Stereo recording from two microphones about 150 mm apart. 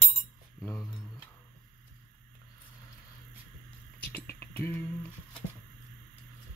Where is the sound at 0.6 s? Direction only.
5° left (ahead or behind).